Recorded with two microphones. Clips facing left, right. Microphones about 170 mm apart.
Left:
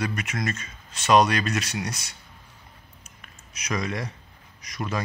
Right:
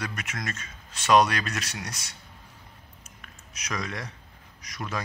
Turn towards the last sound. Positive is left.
turn(degrees=0)  # may be behind; listen again after turning